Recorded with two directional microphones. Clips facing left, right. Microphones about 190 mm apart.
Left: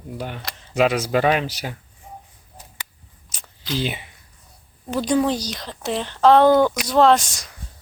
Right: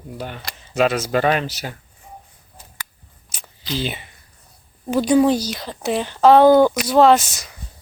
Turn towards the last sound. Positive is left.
turn(degrees=-5)  # may be behind; listen again after turning